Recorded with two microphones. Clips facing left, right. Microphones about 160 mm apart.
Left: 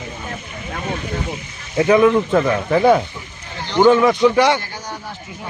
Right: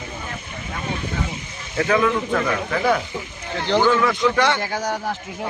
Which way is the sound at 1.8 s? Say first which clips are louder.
Left 6 dB; 20° left (ahead or behind).